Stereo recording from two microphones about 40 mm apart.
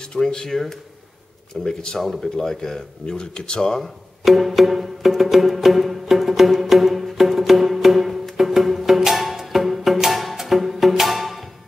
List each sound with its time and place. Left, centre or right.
0.1 s speech: centre
3.1 s speech: centre
4.2 s music: centre